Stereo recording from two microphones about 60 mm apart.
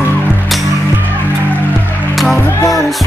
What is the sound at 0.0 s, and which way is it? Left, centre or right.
Music, left.